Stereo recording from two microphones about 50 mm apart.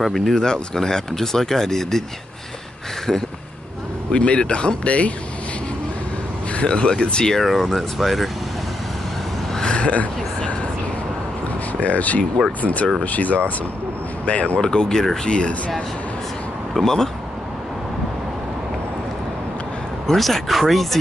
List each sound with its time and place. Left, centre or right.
0.0 s speech: centre
3.1 s speech: centre
4.1 s speech: left
6.5 s speech: left
7.3 s speech: centre
9.5 s a sound: centre
11.8 s speech: left
14.6 s speech: centre
16.7 s speech: centre
20.1 s speech: centre